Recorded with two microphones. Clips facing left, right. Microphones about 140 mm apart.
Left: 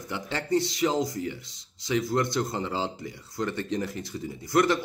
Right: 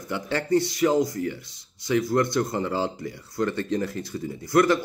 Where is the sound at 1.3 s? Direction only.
55° right (ahead or behind).